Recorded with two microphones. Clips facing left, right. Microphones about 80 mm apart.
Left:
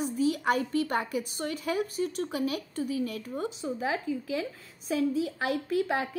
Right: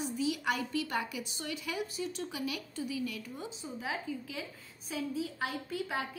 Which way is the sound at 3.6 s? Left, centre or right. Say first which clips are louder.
Left 5 dB; left.